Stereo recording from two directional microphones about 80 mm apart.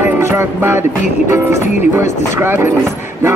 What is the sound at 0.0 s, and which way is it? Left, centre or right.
Music, right.